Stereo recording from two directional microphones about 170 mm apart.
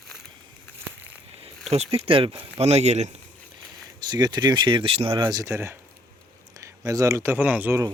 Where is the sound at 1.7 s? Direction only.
35° right (ahead or behind).